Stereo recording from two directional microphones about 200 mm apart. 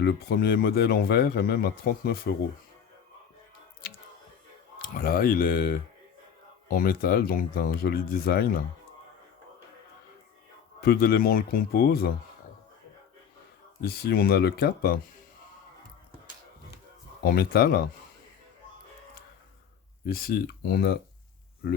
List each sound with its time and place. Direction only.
0.0 s a man's voice: 55° left (ahead or behind)
4.8 s a man's voice: 45° left (ahead or behind)
10.8 s a man's voice: 50° left (ahead or behind)
13.8 s a man's voice: 50° left (ahead or behind)
17.2 s a man's voice: 50° left (ahead or behind)
20.1 s a man's voice: 50° left (ahead or behind)